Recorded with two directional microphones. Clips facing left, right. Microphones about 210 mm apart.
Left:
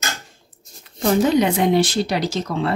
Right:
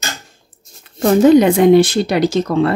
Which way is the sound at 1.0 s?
50° right (ahead or behind).